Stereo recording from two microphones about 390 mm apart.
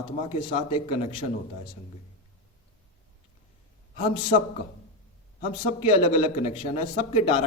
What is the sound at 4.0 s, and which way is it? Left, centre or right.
Speech, centre.